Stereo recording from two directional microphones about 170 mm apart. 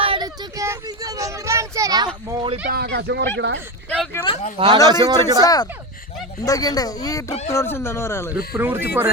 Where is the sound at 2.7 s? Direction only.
75° right (ahead or behind); by 3.6 s 90° right.